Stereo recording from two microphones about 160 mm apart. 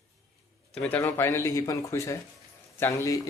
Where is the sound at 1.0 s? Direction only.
15° left (ahead or behind).